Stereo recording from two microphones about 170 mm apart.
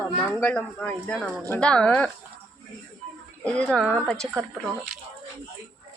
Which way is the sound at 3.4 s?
5° left (ahead or behind).